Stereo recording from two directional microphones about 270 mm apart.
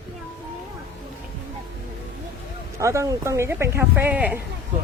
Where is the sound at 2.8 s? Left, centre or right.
Centre.